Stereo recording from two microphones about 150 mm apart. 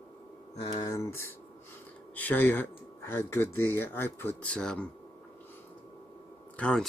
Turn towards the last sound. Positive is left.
turn(degrees=10)  # may be behind; listen again after turning